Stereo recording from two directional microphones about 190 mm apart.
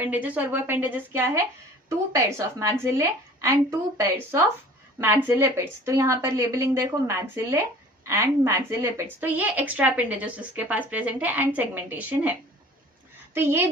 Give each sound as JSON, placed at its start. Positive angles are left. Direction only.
{"t": 0.0, "sound": "a woman's voice", "side_deg": -10}
{"t": 13.3, "sound": "a woman's voice", "side_deg": -10}